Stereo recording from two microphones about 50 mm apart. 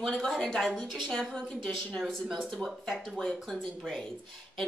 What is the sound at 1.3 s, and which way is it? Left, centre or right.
Speech, centre.